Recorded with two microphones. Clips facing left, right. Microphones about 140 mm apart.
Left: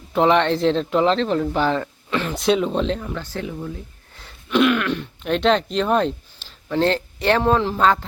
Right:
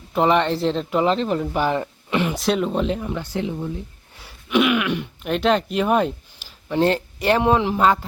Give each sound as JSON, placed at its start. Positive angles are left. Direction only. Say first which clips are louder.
{"t": 0.1, "sound": "speech", "louder": "left 1 dB", "side_deg": -5}
{"t": 2.3, "sound": "speech", "louder": "left 2 dB", "side_deg": 0}
{"t": 4.2, "sound": "speech", "louder": "left 1 dB", "side_deg": -10}